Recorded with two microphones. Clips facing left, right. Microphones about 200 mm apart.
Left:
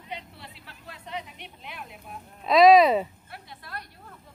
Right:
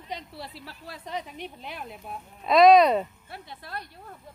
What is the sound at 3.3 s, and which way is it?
Speech, 25° right (ahead or behind).